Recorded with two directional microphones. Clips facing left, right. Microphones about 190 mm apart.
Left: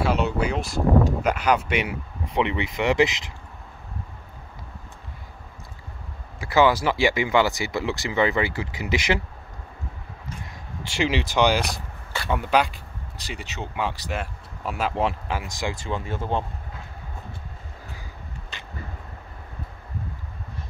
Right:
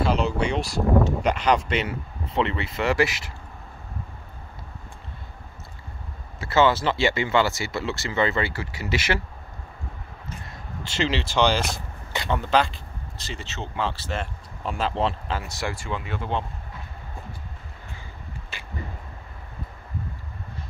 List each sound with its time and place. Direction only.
0.0 s speech: 5° left (ahead or behind)
6.4 s speech: 10° left (ahead or behind)
10.4 s speech: 15° left (ahead or behind)
15.9 s speech: 40° left (ahead or behind)